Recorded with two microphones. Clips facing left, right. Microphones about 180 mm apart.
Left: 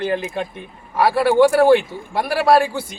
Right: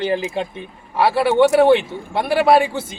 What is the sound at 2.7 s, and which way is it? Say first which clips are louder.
Speech: right 1 dB; 25° right (ahead or behind).